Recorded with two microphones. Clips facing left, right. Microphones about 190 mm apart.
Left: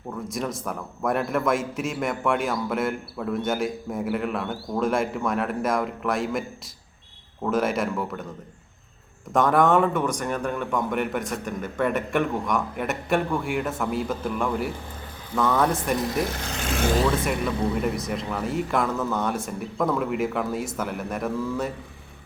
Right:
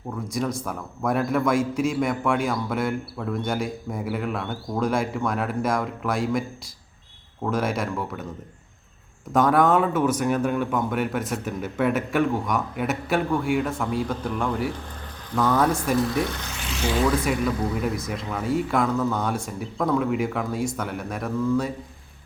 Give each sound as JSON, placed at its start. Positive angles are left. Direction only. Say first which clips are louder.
{"t": 0.3, "sound": "a man's voice", "louder": "right 3 dB", "side_deg": 0}
{"t": 7.4, "sound": "a man's voice", "louder": "left 1 dB", "side_deg": 0}
{"t": 9.3, "sound": "a man's voice", "louder": "even", "side_deg": 0}
{"t": 16.4, "sound": "vehicle", "louder": "left 3 dB", "side_deg": 50}
{"t": 17.7, "sound": "a man's voice", "louder": "left 1 dB", "side_deg": 0}